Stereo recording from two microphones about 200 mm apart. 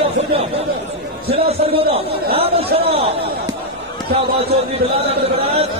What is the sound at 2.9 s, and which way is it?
Speech, 30° right (ahead or behind).